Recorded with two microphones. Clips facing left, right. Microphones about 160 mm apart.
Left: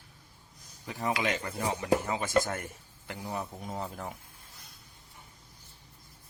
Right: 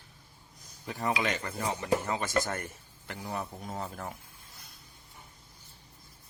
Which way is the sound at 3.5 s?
Centre (ahead or behind).